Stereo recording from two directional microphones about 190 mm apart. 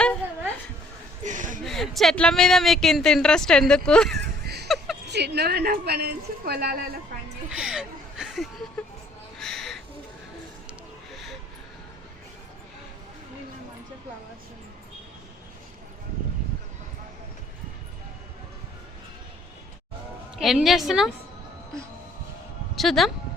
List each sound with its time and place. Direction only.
1.2 s speech: 40° right (ahead or behind)
1.6 s speech: centre (ahead or behind)
4.4 s a sound: 60° right (ahead or behind)
5.0 s a woman's voice: 60° right (ahead or behind)
7.5 s speech: 5° right (ahead or behind)
9.4 s owl: centre (ahead or behind)
11.1 s a sound: centre (ahead or behind)
20.4 s speech: centre (ahead or behind)
22.7 s speech: centre (ahead or behind)